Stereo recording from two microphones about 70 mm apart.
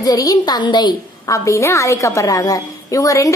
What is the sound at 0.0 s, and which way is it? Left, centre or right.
Speech, left.